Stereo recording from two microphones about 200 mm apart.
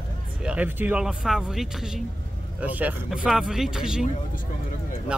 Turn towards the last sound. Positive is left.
turn(degrees=-5)  # may be behind; listen again after turning